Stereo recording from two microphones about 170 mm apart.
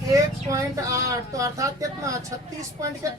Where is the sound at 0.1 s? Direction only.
20° right (ahead or behind).